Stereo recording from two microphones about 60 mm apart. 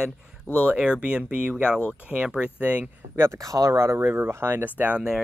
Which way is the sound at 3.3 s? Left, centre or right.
Right.